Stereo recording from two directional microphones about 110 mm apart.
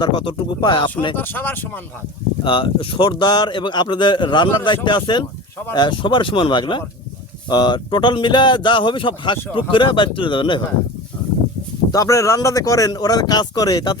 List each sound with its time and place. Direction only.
0.0 s speech: 45° left (ahead or behind)
1.1 s speech: 15° left (ahead or behind)
2.4 s speech: 50° left (ahead or behind)
11.9 s speech: 30° left (ahead or behind)